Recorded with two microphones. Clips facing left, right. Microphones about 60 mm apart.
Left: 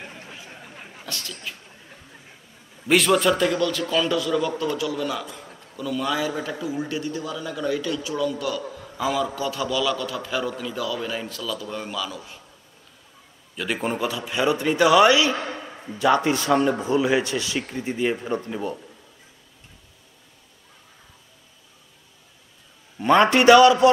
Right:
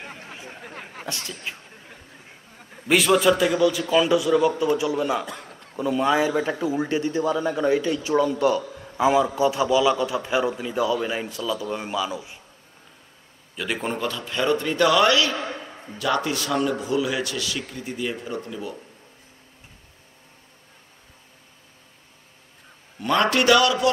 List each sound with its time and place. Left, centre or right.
0.0 s a sound: right
0.7 s chatter: right
1.0 s a man's voice: right
2.9 s a man's voice: centre; by 5.2 s right
5.2 s a man's voice: right
5.8 s a man's voice: right
13.6 s a man's voice: centre
15.7 s a sound: centre
16.0 s speech: left
22.9 s speech: left